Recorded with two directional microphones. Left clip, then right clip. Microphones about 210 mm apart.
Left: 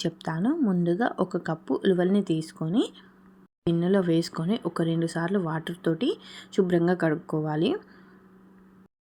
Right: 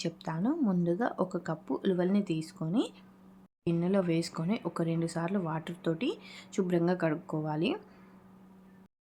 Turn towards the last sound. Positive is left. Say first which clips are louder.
# left 6 dB
turn(degrees=15)  # may be behind; listen again after turning